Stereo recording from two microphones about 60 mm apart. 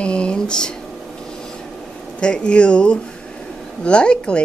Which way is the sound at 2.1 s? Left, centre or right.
Centre.